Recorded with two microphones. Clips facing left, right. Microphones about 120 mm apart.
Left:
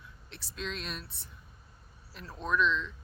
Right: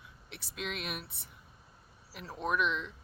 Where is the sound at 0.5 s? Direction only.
15° right (ahead or behind).